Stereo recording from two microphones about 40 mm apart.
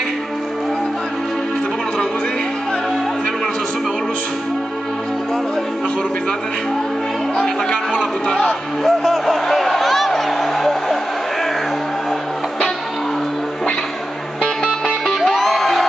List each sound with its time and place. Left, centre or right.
7.3 s music: centre
8.8 s a sound: centre
14.7 s music: centre